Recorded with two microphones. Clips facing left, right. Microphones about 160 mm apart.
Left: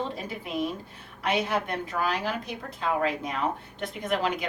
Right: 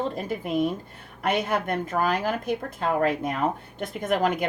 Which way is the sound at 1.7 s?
50° right (ahead or behind).